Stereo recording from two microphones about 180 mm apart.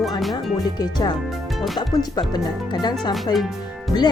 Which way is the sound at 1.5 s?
Centre (ahead or behind).